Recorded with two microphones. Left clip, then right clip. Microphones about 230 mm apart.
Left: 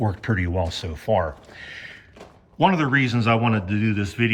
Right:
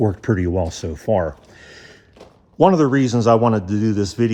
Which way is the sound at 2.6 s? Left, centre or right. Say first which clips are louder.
Right 4 dB; right.